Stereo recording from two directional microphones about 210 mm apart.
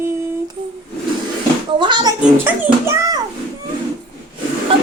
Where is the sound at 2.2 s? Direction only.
10° right (ahead or behind).